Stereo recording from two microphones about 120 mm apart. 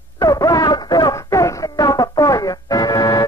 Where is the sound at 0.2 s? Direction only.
30° left (ahead or behind).